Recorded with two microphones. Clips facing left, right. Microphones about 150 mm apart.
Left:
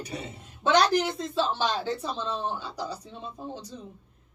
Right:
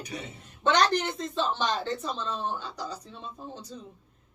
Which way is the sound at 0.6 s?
10° left (ahead or behind).